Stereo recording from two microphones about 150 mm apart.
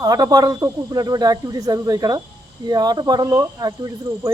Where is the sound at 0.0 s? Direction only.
25° right (ahead or behind).